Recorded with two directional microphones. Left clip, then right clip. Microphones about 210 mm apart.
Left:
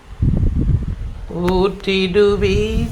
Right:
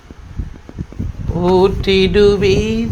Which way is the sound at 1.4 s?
20° right (ahead or behind).